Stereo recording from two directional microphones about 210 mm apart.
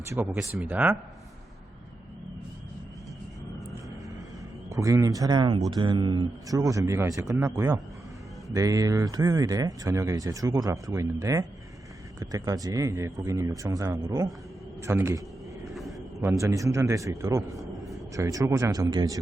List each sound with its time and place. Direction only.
0.1 s speech: 10° right (ahead or behind)
4.7 s speech: 15° right (ahead or behind)
16.4 s speech: 15° right (ahead or behind)